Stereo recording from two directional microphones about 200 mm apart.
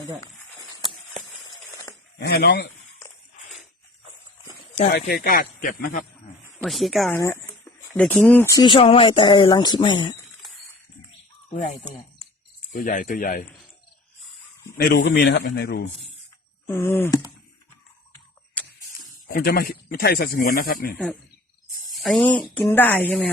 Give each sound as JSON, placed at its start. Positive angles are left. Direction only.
{"t": 1.5, "sound": "a sound", "side_deg": 20}
{"t": 2.1, "sound": "speech", "side_deg": 45}
{"t": 4.9, "sound": "speech", "side_deg": 50}
{"t": 6.6, "sound": "speech", "side_deg": 0}
{"t": 7.1, "sound": "speech", "side_deg": 10}
{"t": 11.5, "sound": "speech", "side_deg": 35}
{"t": 14.8, "sound": "a man's voice", "side_deg": 55}
{"t": 16.6, "sound": "a sound", "side_deg": 10}
{"t": 19.3, "sound": "speech", "side_deg": 50}
{"t": 21.9, "sound": "speech", "side_deg": 0}
{"t": 22.7, "sound": "a sound", "side_deg": 10}